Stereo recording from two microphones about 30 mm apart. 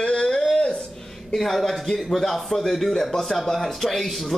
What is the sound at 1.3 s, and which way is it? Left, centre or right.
A man's voice, centre.